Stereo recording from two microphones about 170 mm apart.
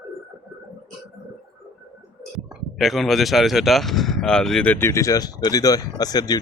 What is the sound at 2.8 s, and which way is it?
Speech, centre (ahead or behind).